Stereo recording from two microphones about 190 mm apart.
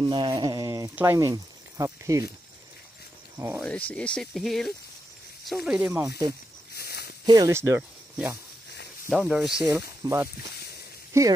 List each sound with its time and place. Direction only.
0.0 s speech: 25° right (ahead or behind)
3.3 s speech: 10° right (ahead or behind)
3.6 s speech: 5° left (ahead or behind)
6.0 s speech: 20° right (ahead or behind)
6.7 s a sound: 55° left (ahead or behind)
7.2 s speech: 20° right (ahead or behind)
9.1 s speech: centre (ahead or behind)
9.7 s speech: 15° right (ahead or behind)